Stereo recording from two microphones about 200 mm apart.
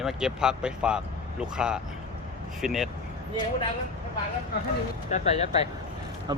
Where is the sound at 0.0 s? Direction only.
Centre (ahead or behind).